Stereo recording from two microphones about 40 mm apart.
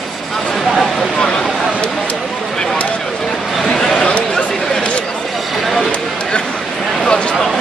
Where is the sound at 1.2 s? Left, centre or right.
Centre.